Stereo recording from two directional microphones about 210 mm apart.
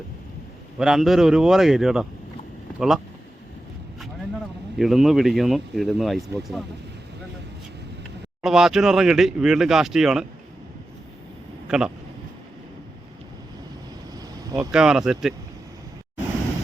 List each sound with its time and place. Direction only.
0.8 s speech: centre (ahead or behind)
4.8 s speech: centre (ahead or behind)
8.4 s speech: centre (ahead or behind)
11.7 s speech: 5° right (ahead or behind)
14.2 s vehicle: 15° right (ahead or behind)
14.7 s speech: 5° right (ahead or behind)